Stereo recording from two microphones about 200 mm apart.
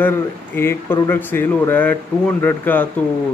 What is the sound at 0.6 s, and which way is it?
Speech, 15° left (ahead or behind).